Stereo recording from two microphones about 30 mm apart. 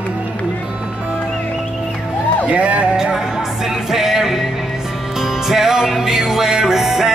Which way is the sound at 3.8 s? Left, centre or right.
Centre.